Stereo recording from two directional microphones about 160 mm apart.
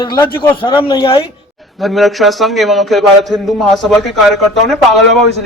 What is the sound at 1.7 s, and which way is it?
A man's voice, centre (ahead or behind).